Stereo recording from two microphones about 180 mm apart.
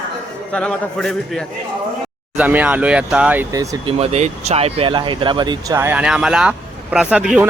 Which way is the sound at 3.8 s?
35° right (ahead or behind).